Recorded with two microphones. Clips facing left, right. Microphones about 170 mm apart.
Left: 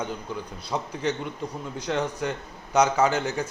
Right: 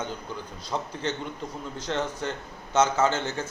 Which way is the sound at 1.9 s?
10° left (ahead or behind).